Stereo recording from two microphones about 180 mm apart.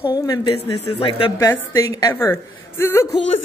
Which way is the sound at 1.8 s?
15° left (ahead or behind).